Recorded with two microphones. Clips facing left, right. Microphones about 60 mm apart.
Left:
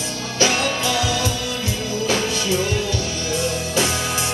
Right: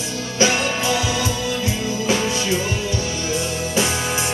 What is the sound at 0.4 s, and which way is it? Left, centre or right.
Music, right.